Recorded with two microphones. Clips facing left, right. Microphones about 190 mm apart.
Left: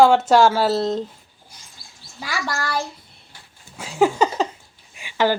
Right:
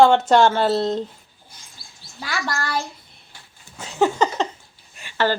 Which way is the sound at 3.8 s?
10° left (ahead or behind).